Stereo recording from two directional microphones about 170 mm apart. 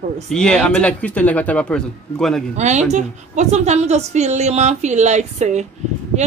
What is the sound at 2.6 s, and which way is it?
A woman's voice, 45° right (ahead or behind).